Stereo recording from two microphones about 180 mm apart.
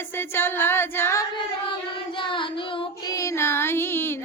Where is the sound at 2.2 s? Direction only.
30° left (ahead or behind).